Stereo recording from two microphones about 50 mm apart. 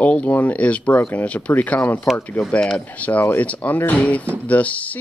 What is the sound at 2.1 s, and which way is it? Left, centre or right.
Speech, left.